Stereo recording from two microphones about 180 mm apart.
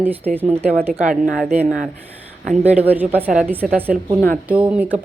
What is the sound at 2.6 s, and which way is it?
Speech, 40° right (ahead or behind).